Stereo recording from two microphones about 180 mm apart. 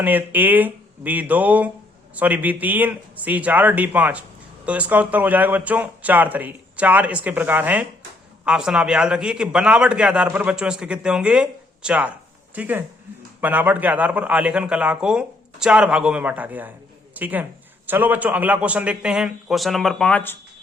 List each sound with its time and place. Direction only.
0.0 s a man's voice: 10° right (ahead or behind); by 20.4 s 10° left (ahead or behind)